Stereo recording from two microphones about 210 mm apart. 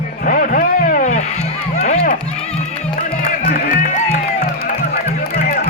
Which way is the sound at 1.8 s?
35° left (ahead or behind).